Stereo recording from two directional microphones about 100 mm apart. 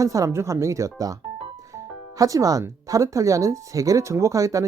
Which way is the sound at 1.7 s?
35° right (ahead or behind).